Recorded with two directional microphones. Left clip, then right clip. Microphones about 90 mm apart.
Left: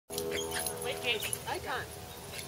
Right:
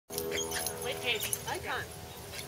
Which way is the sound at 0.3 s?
Centre (ahead or behind).